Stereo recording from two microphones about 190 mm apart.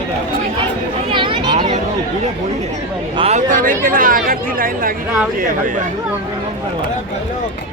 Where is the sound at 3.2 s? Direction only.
35° right (ahead or behind).